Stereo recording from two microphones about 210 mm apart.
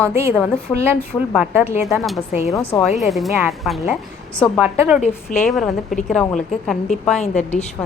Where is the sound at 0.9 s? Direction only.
10° left (ahead or behind).